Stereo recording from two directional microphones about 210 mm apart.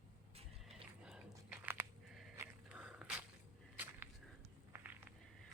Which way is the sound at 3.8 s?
10° right (ahead or behind).